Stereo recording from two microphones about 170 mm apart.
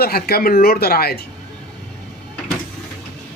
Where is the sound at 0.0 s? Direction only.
65° left (ahead or behind).